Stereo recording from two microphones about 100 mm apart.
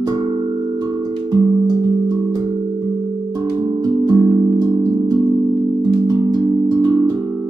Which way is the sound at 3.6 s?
45° right (ahead or behind).